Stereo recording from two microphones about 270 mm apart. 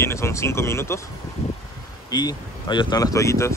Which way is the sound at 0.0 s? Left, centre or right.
Centre.